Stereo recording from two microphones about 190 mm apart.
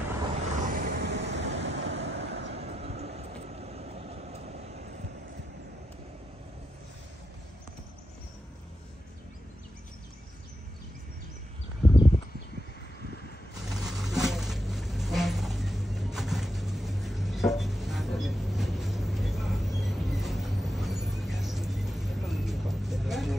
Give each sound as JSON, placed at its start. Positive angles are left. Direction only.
{"t": 0.7, "sound": "vehicle", "side_deg": -50}
{"t": 2.5, "sound": "vehicle", "side_deg": -35}
{"t": 13.7, "sound": "a sound", "side_deg": 0}